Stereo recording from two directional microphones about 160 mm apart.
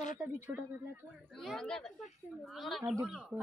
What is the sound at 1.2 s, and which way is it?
Speech, 5° left (ahead or behind).